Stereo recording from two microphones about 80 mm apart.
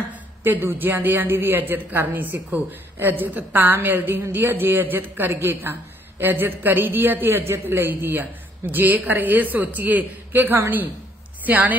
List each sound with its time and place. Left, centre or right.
0.1 s speech: right